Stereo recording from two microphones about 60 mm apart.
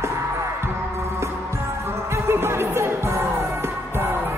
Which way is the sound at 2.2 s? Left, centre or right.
Right.